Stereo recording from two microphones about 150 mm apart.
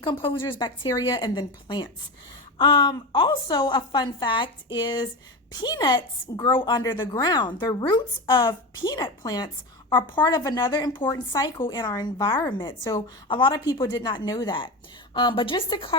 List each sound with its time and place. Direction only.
0.0 s a woman's voice: 35° left (ahead or behind)
12.9 s a woman's voice: 35° left (ahead or behind)